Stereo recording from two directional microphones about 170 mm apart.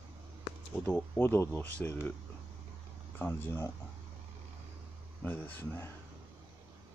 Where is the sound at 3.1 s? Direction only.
10° left (ahead or behind).